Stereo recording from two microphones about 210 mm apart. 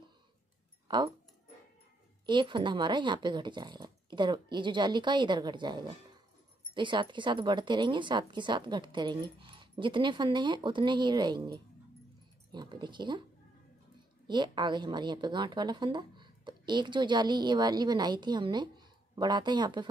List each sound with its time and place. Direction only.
0.8 s speech: 20° right (ahead or behind)
2.2 s a woman's voice: 20° right (ahead or behind)
14.2 s a woman's voice: 20° right (ahead or behind)